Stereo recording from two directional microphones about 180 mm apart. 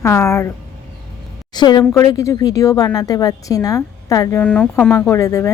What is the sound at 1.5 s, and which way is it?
A woman's voice, 25° left (ahead or behind).